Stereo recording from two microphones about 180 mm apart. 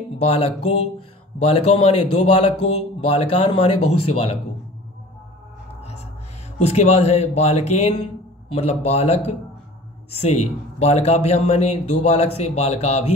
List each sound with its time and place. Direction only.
0.2 s speech: 35° left (ahead or behind)
6.6 s speech: 35° left (ahead or behind)